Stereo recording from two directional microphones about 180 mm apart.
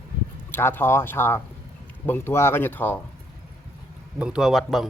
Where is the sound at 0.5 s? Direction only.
10° left (ahead or behind).